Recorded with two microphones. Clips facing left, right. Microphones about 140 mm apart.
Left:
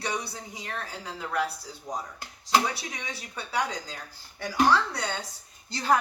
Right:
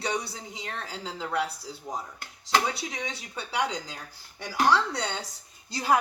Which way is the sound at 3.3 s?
25° right (ahead or behind).